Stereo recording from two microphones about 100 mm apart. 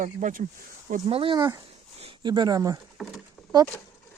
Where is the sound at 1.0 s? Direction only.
65° right (ahead or behind).